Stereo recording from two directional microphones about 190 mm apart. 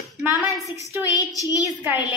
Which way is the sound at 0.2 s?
5° right (ahead or behind).